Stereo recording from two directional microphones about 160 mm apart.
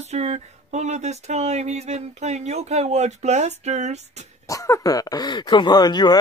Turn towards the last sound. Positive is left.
turn(degrees=25)  # may be behind; listen again after turning